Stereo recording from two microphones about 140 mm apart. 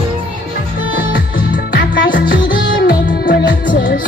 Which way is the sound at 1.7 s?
85° left.